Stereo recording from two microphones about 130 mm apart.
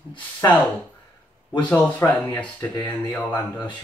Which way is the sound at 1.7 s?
15° left (ahead or behind).